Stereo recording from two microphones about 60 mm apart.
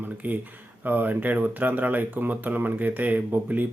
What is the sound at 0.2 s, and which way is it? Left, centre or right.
A man's voice, right.